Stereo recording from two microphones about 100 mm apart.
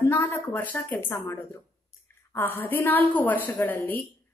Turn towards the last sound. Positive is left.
turn(degrees=25)  # may be behind; listen again after turning